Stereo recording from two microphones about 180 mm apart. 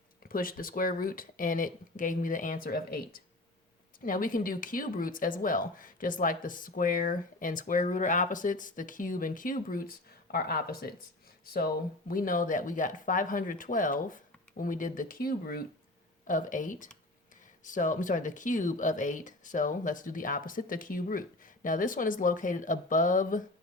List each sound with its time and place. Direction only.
0.2 s speech: 55° left (ahead or behind)